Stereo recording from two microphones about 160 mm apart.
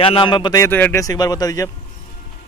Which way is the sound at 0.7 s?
10° left (ahead or behind).